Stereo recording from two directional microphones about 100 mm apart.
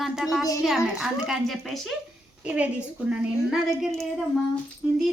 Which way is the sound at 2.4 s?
15° right (ahead or behind).